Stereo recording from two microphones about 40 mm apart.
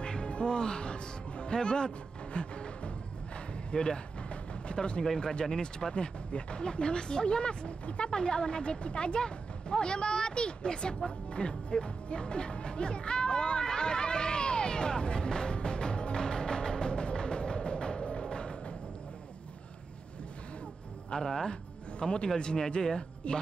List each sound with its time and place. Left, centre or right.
0.0 s music: left
3.7 s a sound: left
5.2 s speech: left
11.1 s music: left
21.2 s speech: centre
22.0 s speech: left